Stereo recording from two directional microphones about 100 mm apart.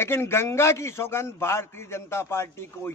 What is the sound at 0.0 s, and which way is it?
A man's voice, 25° left (ahead or behind).